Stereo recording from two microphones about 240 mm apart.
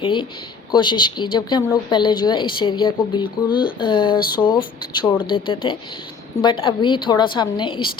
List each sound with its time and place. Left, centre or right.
0.0 s speech: centre